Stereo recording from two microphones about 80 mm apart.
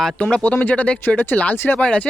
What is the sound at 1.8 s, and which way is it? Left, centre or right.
Speech, centre.